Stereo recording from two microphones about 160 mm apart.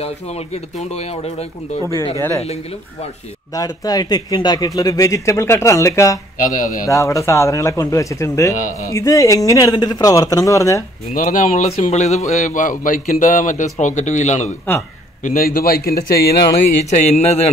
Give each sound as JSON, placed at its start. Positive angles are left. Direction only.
{"t": 0.0, "sound": "speech", "side_deg": 40}
{"t": 2.1, "sound": "speech", "side_deg": 20}
{"t": 2.4, "sound": "speech", "side_deg": 40}
{"t": 3.5, "sound": "speech", "side_deg": 25}
{"t": 6.4, "sound": "speech", "side_deg": 55}
{"t": 6.9, "sound": "speech", "side_deg": 20}
{"t": 11.1, "sound": "a man's voice", "side_deg": 55}
{"t": 15.2, "sound": "a man's voice", "side_deg": 65}
{"t": 16.5, "sound": "a man's voice", "side_deg": 45}